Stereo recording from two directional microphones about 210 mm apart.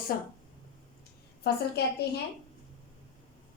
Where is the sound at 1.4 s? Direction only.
50° left (ahead or behind).